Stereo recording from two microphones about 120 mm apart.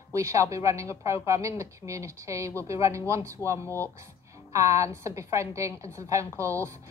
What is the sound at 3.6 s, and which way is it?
Speech, 20° left (ahead or behind).